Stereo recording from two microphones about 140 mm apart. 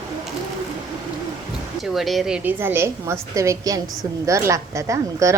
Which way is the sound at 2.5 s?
15° right (ahead or behind).